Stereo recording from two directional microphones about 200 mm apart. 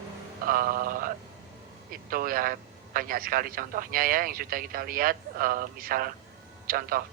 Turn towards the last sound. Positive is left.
turn(degrees=-45)  # may be behind; listen again after turning